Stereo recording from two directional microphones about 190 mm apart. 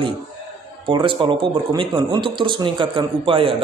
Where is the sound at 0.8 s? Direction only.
25° right (ahead or behind).